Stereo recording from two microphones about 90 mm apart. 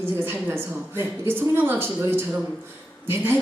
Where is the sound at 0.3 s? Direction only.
25° right (ahead or behind).